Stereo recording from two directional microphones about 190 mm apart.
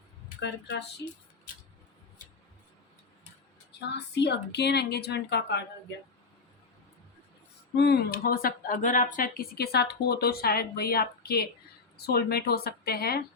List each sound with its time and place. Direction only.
0.3 s a woman's voice: 65° left (ahead or behind)
3.7 s a woman's voice: 65° left (ahead or behind)
7.8 s a woman's voice: 60° left (ahead or behind)